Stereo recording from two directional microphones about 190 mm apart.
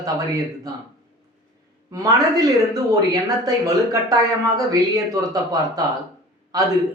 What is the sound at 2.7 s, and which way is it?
Speech, 20° right (ahead or behind).